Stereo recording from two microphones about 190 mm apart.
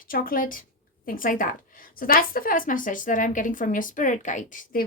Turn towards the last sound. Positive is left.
turn(degrees=45)  # may be behind; listen again after turning